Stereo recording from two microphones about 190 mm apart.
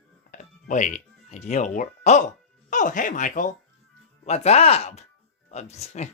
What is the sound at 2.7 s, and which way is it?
Speech, 40° left (ahead or behind).